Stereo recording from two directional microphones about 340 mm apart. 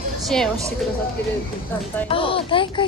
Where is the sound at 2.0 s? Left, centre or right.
Centre.